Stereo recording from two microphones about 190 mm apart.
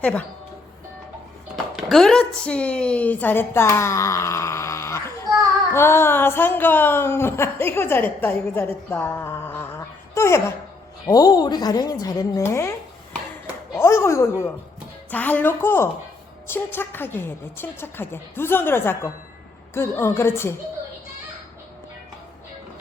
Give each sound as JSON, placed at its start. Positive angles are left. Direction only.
{"t": 0.0, "sound": "speech", "side_deg": 5}
{"t": 1.7, "sound": "a woman's voice", "side_deg": 0}
{"t": 13.7, "sound": "speech", "side_deg": 15}